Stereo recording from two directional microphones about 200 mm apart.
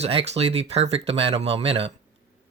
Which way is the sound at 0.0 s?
30° right (ahead or behind).